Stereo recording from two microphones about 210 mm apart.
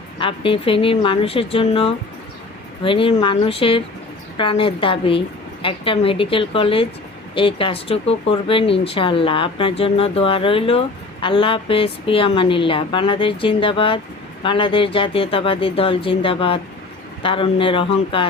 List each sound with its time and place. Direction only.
0.2 s speech: 25° left (ahead or behind)